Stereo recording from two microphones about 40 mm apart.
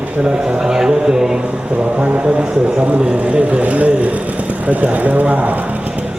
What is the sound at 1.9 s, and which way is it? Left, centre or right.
Speech, right.